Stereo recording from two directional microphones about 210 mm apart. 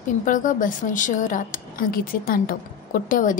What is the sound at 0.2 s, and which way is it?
A woman's voice, 40° left (ahead or behind).